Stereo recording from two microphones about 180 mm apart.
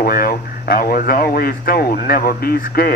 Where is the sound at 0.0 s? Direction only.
55° left (ahead or behind).